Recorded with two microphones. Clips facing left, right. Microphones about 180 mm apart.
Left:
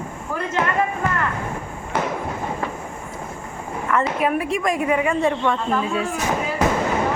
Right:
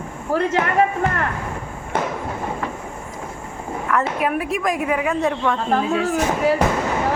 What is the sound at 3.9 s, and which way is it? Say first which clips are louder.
A man's voice: left 1 dB; centre (ahead or behind).